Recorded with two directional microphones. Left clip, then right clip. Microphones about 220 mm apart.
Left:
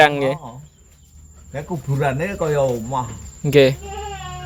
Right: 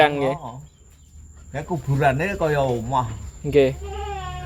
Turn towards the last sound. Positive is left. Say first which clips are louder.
# left 4 dB
turn(degrees=20)  # may be behind; listen again after turning